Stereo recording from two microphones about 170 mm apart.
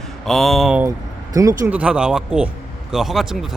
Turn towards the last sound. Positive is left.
turn(degrees=0)  # may be behind; listen again after turning